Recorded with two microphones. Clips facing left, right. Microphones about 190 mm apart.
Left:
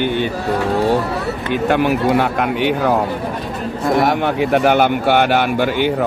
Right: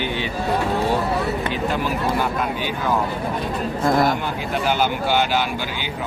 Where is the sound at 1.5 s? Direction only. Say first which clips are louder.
Left 7 dB; 70° left (ahead or behind).